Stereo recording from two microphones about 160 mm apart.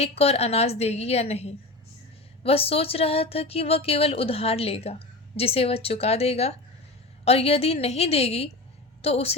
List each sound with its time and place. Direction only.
0.0 s a woman's voice: 40° left (ahead or behind)